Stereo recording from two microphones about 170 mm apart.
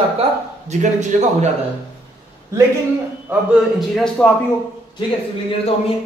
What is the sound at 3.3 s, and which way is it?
A man's voice, centre (ahead or behind).